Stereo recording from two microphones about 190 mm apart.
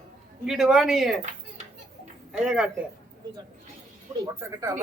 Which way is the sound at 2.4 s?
5° right (ahead or behind).